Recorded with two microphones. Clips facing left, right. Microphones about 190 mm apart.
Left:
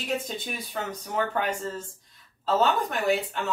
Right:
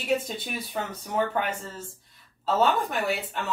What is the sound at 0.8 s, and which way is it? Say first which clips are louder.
Speech: right 1 dB; 5° right (ahead or behind).